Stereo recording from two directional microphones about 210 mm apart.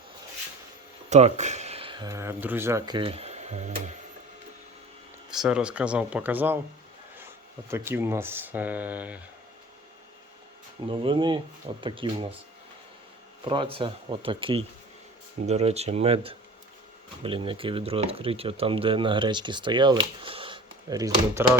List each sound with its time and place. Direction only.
1.1 s speech: 35° right (ahead or behind)
5.3 s speech: 5° right (ahead or behind)
10.8 s speech: 25° right (ahead or behind)
13.4 s speech: 25° right (ahead or behind)